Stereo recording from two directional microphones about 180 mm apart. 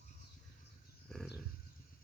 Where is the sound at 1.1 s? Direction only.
5° left (ahead or behind).